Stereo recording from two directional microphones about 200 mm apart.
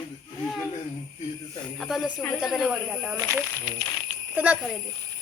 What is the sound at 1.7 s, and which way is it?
A child's voice, centre (ahead or behind).